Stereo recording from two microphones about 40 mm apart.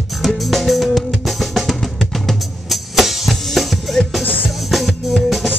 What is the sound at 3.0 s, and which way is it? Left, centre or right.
Music, centre.